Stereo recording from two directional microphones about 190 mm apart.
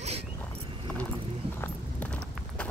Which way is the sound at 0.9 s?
5° left (ahead or behind).